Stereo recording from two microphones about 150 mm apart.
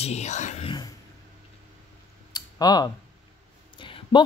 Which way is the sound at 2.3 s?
25° left (ahead or behind).